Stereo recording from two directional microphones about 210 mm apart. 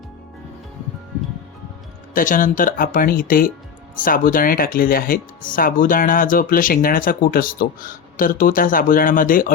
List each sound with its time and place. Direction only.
2.1 s speech: 40° left (ahead or behind)